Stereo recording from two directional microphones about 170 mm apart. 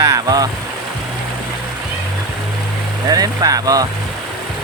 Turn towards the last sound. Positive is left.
turn(degrees=-20)  # may be behind; listen again after turning